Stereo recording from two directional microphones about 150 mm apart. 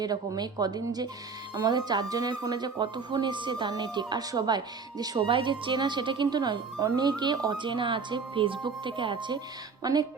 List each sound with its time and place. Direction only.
0.0 s speech: 25° right (ahead or behind)